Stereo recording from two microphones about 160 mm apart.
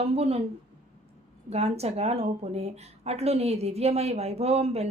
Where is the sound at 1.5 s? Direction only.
40° right (ahead or behind).